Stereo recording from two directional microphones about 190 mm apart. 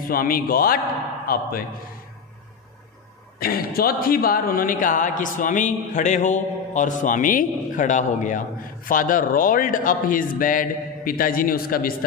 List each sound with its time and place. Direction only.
0.1 s a man's voice: 50° left (ahead or behind)
3.3 s a man's voice: 50° left (ahead or behind)